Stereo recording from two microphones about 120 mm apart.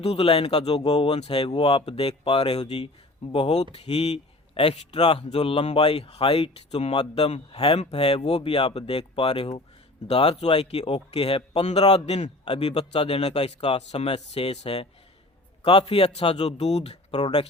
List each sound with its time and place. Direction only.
0.0 s a man's voice: 55° left (ahead or behind)
5.0 s a man's voice: 50° left (ahead or behind)
15.9 s a man's voice: 55° left (ahead or behind)